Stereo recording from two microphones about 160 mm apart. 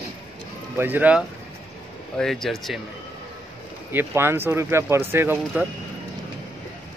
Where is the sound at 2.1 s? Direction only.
Centre (ahead or behind).